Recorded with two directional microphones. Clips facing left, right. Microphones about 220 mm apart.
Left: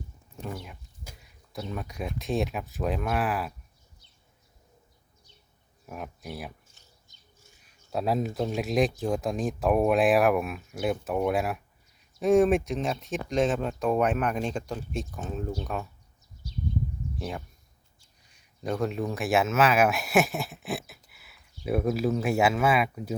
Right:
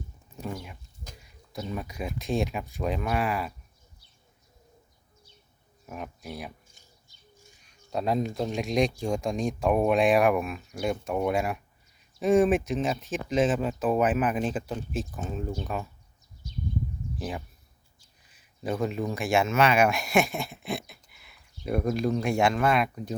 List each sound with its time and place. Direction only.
0.4 s speech: centre (ahead or behind)
5.8 s speech: centre (ahead or behind)
6.8 s bird: 10° right (ahead or behind)
7.6 s speech: 5° left (ahead or behind)
17.2 s speech: centre (ahead or behind)